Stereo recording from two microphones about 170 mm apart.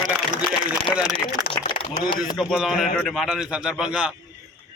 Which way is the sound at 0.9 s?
5° right (ahead or behind).